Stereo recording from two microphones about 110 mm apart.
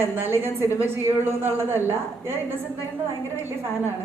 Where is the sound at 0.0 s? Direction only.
20° right (ahead or behind).